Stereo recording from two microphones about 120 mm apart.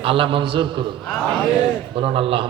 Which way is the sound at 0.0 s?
45° right (ahead or behind).